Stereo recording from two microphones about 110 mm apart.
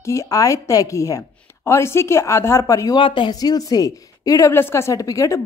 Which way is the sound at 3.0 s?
50° left (ahead or behind).